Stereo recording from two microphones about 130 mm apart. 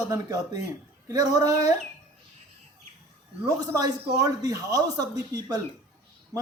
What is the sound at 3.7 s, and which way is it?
A man's voice, 25° right (ahead or behind).